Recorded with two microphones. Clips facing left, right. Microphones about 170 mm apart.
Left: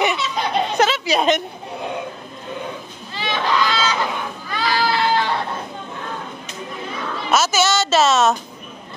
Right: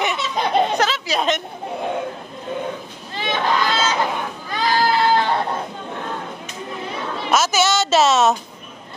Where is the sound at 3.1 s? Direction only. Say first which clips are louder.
Even; 50° right (ahead or behind).